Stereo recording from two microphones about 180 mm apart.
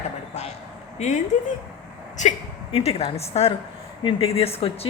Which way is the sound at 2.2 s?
40° left (ahead or behind).